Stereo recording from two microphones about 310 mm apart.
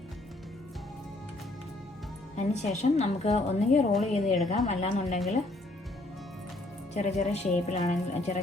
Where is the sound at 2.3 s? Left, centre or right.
Left.